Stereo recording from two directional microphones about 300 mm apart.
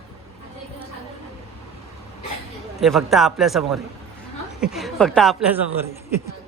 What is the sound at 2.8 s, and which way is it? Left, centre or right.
A man's voice, centre.